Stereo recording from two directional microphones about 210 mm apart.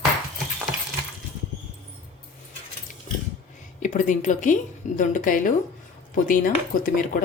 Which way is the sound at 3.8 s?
40° left (ahead or behind).